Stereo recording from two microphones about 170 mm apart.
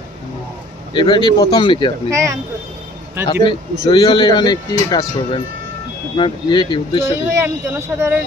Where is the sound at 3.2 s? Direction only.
25° left (ahead or behind).